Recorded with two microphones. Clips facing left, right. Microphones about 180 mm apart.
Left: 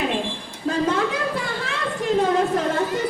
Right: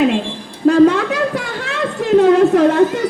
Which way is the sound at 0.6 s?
75° right (ahead or behind).